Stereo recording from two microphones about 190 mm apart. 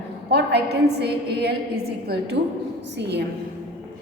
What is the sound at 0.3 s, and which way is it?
A woman's voice, 60° right (ahead or behind).